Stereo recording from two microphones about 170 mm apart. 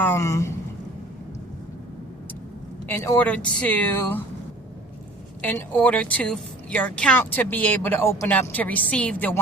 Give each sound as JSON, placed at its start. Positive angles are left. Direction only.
{"t": 0.0, "sound": "a woman's voice", "side_deg": 15}
{"t": 2.8, "sound": "a woman's voice", "side_deg": 15}
{"t": 5.4, "sound": "a woman's voice", "side_deg": 10}